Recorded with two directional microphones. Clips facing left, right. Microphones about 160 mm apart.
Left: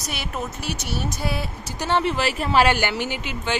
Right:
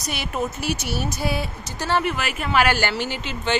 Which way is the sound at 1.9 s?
25° left (ahead or behind).